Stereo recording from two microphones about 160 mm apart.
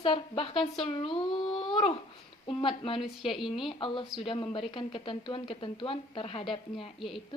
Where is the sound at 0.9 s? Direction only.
30° left (ahead or behind).